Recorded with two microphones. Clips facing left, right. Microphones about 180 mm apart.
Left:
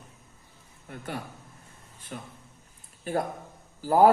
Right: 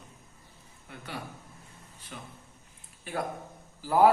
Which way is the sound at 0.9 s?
50° left (ahead or behind).